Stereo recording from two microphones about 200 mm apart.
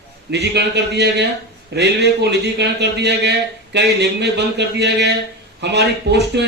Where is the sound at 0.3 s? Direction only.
55° right (ahead or behind).